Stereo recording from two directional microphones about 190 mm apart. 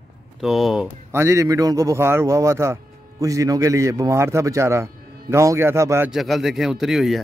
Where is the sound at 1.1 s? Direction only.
15° right (ahead or behind).